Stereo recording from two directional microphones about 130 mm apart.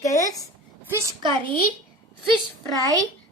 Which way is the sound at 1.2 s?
40° right (ahead or behind).